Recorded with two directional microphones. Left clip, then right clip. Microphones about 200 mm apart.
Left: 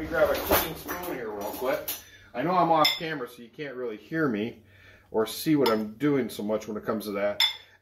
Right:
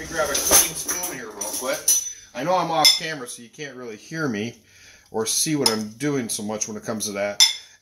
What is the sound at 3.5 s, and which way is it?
Speech, 35° right (ahead or behind).